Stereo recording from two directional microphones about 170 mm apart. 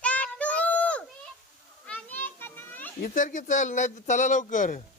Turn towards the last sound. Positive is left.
turn(degrees=50)  # may be behind; listen again after turning